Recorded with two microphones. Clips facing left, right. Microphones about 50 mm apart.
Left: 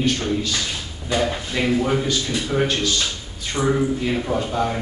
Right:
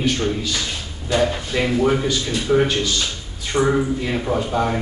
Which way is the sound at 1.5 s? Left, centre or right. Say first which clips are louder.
Right 1 dB; centre.